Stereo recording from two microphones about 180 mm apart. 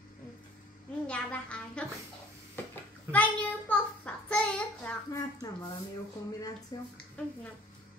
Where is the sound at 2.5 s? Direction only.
10° left (ahead or behind).